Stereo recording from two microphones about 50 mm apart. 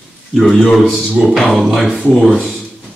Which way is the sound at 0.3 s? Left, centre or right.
Centre.